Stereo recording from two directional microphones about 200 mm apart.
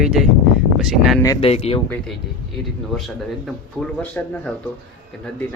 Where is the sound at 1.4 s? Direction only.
30° left (ahead or behind).